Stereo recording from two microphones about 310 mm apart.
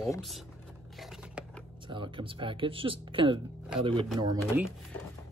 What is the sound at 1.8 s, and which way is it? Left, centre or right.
Speech, centre.